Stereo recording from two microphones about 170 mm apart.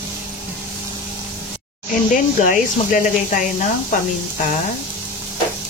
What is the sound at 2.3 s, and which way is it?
Speech, 50° left (ahead or behind).